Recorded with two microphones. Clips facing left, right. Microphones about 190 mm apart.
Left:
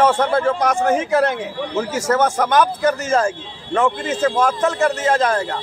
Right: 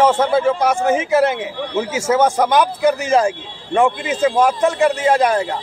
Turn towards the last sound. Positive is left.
turn(degrees=-15)  # may be behind; listen again after turning